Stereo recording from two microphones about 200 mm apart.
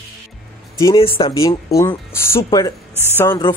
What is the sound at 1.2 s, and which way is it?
Speech, 25° left (ahead or behind).